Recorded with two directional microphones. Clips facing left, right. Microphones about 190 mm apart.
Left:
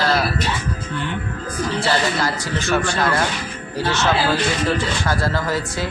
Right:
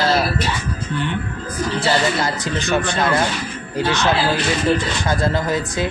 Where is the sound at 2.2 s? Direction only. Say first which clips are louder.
Right 1 dB; 20° right (ahead or behind).